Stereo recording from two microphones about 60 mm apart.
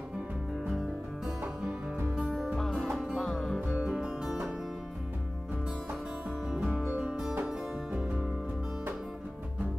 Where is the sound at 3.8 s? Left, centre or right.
Centre.